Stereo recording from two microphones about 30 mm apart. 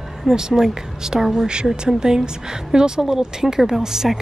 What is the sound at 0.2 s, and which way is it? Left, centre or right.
A woman's voice, centre.